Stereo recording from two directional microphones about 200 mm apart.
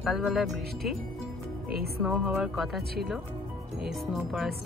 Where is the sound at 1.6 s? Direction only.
50° right (ahead or behind).